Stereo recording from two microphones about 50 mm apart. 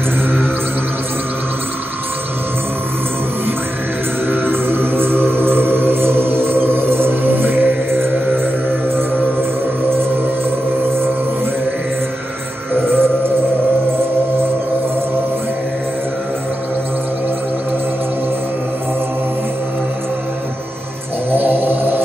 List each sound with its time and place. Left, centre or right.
4.3 s music: right
12.7 s music: right
21.3 s snoring: right